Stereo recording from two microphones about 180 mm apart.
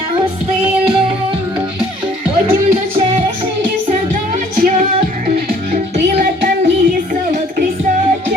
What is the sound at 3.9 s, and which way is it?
Music, 40° right (ahead or behind).